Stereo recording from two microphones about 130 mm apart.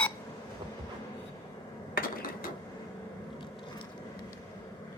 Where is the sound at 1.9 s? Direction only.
90° left.